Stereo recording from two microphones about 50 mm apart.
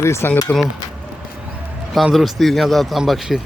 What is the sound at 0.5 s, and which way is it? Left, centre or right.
Speech, left.